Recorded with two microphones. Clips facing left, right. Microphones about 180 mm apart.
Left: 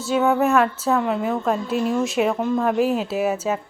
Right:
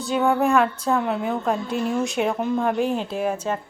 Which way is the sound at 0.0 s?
Centre (ahead or behind).